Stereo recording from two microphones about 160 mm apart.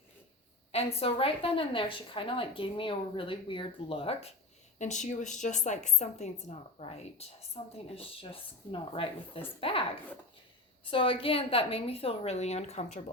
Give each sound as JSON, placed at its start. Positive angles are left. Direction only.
{"t": 0.7, "sound": "a woman's voice", "side_deg": 40}
{"t": 10.9, "sound": "a woman's voice", "side_deg": 35}